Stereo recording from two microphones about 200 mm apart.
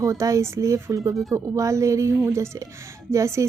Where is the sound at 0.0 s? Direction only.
15° right (ahead or behind).